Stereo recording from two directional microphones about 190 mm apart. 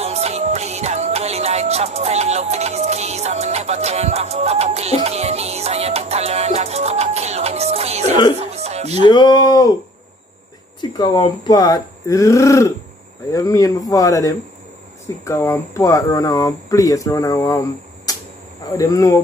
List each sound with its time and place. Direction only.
0.0 s music: 35° right (ahead or behind)
8.4 s a sound: 35° right (ahead or behind)
9.0 s speech: 20° left (ahead or behind)
10.8 s speech: 20° left (ahead or behind)